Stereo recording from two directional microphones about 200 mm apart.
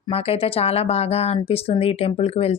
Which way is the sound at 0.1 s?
30° left (ahead or behind).